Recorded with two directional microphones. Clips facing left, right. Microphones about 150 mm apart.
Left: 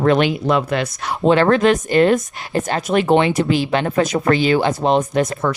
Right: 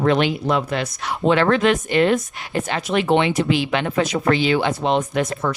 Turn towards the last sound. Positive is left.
turn(degrees=40)  # may be behind; listen again after turning